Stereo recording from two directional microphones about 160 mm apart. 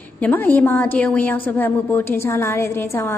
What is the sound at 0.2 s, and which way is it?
A woman's voice, 10° left (ahead or behind).